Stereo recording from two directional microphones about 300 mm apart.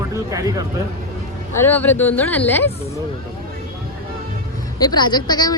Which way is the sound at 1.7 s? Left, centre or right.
Centre.